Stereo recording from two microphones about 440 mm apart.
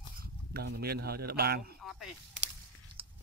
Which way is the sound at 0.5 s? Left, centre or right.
Right.